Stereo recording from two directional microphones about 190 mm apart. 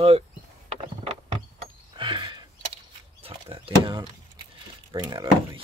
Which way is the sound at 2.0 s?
25° right (ahead or behind).